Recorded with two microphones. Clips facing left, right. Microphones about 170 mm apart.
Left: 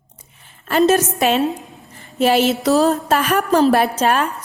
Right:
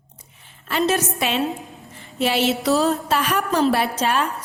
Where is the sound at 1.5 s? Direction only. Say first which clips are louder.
Left 3 dB; centre (ahead or behind).